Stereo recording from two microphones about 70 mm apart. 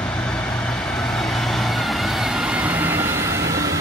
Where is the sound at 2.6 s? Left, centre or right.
Right.